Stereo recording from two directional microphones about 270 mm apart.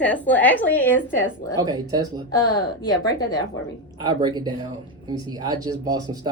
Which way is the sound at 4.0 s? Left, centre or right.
Centre.